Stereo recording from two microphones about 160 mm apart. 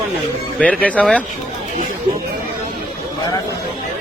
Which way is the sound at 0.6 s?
10° left (ahead or behind).